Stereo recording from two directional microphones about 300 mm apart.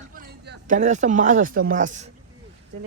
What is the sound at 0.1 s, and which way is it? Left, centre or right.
Speech, right.